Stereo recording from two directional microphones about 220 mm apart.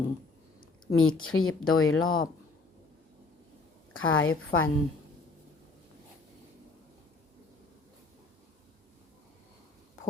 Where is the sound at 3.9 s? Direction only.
65° left (ahead or behind).